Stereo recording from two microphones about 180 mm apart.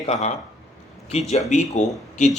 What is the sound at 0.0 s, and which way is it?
Speech, 40° left (ahead or behind).